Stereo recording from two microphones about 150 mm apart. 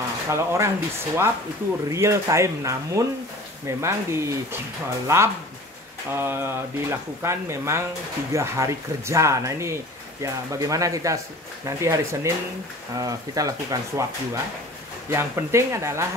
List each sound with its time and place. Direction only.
0.3 s speech: 20° right (ahead or behind)